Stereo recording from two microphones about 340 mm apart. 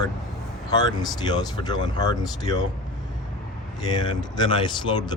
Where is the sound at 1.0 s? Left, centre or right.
Centre.